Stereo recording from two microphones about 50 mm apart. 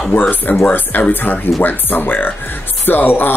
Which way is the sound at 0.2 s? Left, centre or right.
Left.